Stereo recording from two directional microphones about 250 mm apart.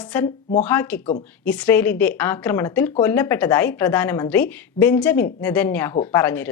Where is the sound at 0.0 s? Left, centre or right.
Centre.